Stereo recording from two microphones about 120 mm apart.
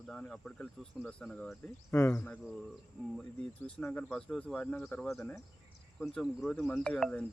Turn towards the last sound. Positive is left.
turn(degrees=10)  # may be behind; listen again after turning